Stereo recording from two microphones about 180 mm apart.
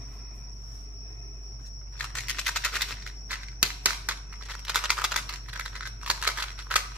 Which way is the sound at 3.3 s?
10° right (ahead or behind).